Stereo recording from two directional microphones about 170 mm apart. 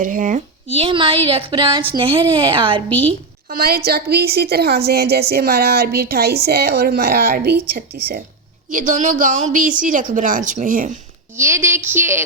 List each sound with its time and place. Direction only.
0.0 s speech: 50° right (ahead or behind)
0.7 s speech: 35° right (ahead or behind)
3.5 s a woman's voice: 65° right (ahead or behind)
8.7 s speech: 50° right (ahead or behind)
11.3 s speech: 15° right (ahead or behind)